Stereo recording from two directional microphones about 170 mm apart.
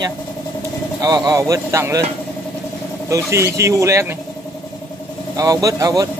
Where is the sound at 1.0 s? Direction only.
25° right (ahead or behind).